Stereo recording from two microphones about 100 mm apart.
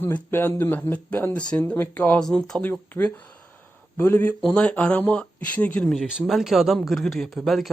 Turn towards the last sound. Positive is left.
turn(degrees=0)  # may be behind; listen again after turning